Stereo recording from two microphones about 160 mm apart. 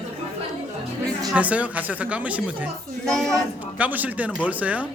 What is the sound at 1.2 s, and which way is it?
Speech, 5° right (ahead or behind).